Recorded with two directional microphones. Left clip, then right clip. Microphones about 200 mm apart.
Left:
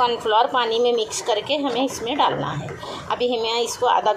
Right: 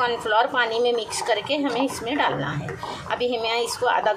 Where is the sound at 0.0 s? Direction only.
Centre (ahead or behind).